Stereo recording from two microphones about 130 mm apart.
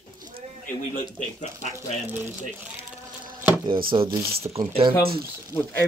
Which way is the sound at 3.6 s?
40° right (ahead or behind).